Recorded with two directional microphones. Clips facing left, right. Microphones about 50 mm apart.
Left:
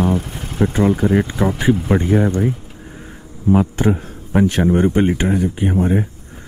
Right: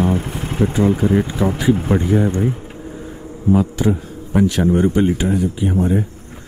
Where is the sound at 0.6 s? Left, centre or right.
Left.